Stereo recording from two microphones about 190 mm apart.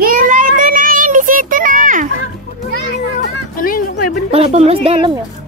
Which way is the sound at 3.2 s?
50° left (ahead or behind).